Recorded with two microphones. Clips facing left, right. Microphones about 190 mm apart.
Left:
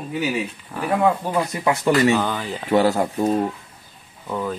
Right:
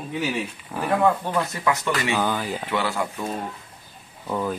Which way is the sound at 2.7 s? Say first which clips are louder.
Left 11 dB; 40° left (ahead or behind).